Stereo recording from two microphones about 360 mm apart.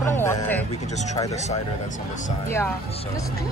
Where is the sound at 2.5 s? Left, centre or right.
Centre.